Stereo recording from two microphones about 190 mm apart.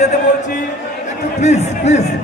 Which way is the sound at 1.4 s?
35° left (ahead or behind).